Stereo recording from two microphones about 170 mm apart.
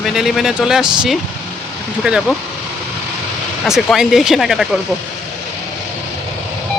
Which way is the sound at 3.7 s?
Centre (ahead or behind).